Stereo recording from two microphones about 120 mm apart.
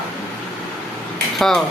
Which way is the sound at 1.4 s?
Centre (ahead or behind).